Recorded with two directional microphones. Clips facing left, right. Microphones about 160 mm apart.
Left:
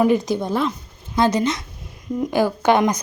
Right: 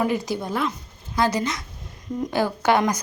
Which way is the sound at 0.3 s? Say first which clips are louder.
Left 4 dB; 25° left (ahead or behind).